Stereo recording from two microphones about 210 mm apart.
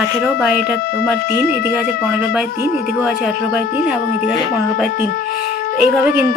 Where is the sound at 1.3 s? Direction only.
10° right (ahead or behind).